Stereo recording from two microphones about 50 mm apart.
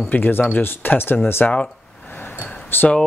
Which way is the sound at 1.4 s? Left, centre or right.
Left.